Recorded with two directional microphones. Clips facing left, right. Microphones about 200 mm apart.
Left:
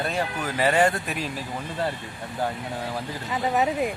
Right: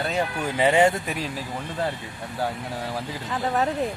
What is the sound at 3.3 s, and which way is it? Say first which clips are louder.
Speech: left 1 dB; 5° left (ahead or behind).